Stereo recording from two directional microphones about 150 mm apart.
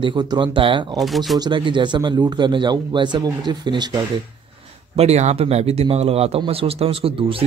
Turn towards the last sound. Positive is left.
turn(degrees=-40)  # may be behind; listen again after turning